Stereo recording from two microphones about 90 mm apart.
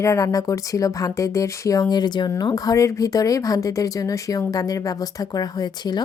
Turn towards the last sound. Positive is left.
turn(degrees=50)  # may be behind; listen again after turning